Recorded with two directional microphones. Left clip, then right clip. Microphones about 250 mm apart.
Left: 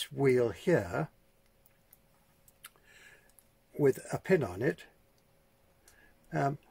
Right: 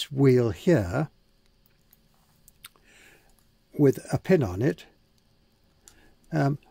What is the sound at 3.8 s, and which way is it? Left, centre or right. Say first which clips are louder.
Speech: right 6 dB; right.